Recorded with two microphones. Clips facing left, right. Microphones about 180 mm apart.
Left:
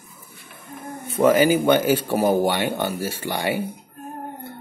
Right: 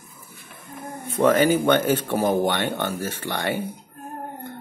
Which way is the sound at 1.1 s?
10° left (ahead or behind).